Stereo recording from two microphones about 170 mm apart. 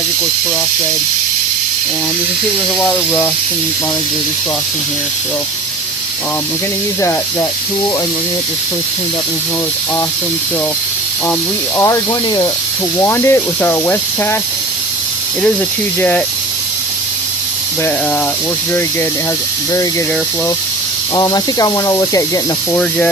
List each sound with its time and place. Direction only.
2.7 s speech: 10° left (ahead or behind)
11.8 s speech: 20° left (ahead or behind)
16.0 s speech: 10° left (ahead or behind)
21.2 s speech: 20° left (ahead or behind)
22.7 s speech: 10° left (ahead or behind)